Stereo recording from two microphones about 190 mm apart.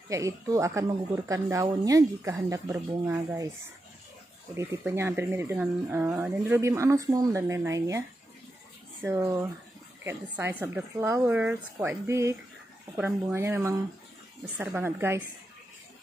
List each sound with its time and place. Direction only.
0.1 s speech: 15° right (ahead or behind)
4.6 s speech: 15° right (ahead or behind)
9.0 s speech: 15° right (ahead or behind)